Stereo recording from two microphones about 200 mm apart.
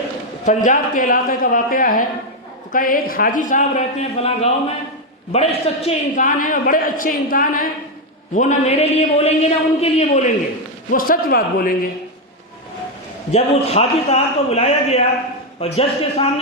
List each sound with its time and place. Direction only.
0.4 s a man's voice: 40° left (ahead or behind)
10.9 s a man's voice: 45° left (ahead or behind)
13.3 s a man's voice: 30° left (ahead or behind)